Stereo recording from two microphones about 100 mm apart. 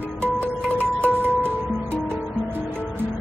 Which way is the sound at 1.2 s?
20° right (ahead or behind).